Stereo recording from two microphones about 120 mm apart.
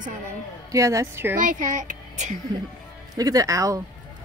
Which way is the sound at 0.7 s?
25° right (ahead or behind).